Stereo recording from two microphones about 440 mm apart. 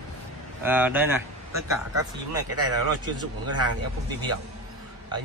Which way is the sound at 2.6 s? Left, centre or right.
Right.